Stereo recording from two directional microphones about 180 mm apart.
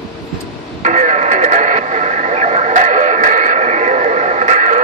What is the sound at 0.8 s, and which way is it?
Radio, 40° right (ahead or behind).